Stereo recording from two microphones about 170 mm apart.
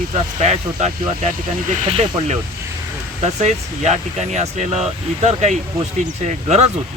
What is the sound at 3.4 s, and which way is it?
Speech, 40° right (ahead or behind).